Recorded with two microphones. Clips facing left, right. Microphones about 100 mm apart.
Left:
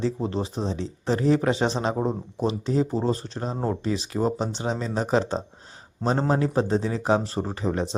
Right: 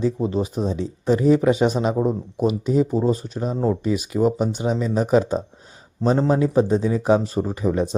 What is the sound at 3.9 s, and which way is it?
Speech, 30° left (ahead or behind).